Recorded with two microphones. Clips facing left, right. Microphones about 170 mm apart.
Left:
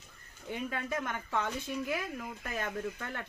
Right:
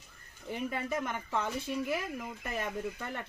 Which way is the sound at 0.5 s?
5° right (ahead or behind).